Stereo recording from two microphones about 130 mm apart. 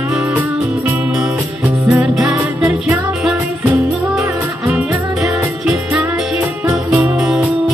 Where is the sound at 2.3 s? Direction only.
25° right (ahead or behind).